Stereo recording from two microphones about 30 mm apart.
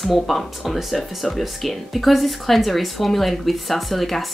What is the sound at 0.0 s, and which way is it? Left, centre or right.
Speech, centre.